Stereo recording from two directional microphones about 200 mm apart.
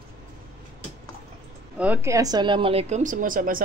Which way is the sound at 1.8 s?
10° right (ahead or behind).